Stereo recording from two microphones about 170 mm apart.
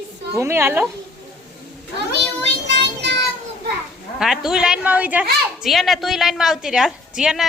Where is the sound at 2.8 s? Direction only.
90° right.